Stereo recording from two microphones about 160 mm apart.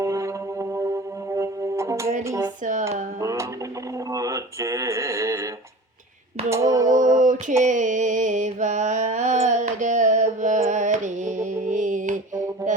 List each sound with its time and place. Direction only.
0.0 s music: 20° right (ahead or behind)
2.2 s speech: 20° right (ahead or behind)
3.2 s a sound: 20° right (ahead or behind)
4.1 s speech: 20° right (ahead or behind)
6.5 s speech: 20° right (ahead or behind)
7.2 s a sound: 50° right (ahead or behind)
7.6 s mantra: 50° right (ahead or behind)
10.7 s music: 50° right (ahead or behind)